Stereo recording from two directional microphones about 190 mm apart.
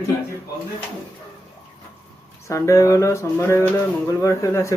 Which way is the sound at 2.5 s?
15° left (ahead or behind).